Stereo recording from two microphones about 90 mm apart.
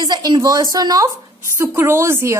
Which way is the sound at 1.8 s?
30° right (ahead or behind).